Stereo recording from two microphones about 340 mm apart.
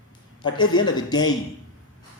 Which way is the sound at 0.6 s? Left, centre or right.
Left.